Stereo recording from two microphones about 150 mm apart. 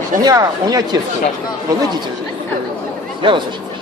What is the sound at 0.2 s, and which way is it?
Speech, 25° right (ahead or behind).